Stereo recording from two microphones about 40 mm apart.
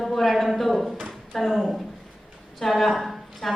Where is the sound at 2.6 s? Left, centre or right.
Centre.